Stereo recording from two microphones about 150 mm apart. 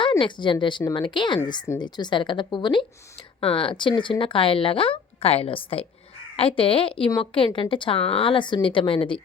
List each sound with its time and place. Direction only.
0.2 s speech: 30° left (ahead or behind)